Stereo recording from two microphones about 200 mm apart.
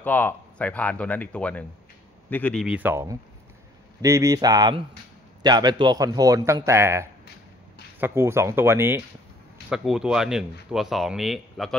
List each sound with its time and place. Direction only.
0.0 s a man's voice: 10° left (ahead or behind)